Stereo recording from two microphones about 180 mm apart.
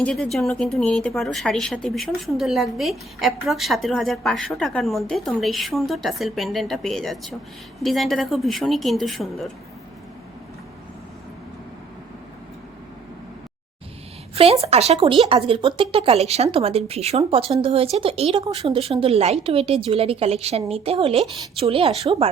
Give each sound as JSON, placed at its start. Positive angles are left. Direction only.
{"t": 0.0, "sound": "a woman's voice", "side_deg": 5}
{"t": 14.3, "sound": "speech", "side_deg": -35}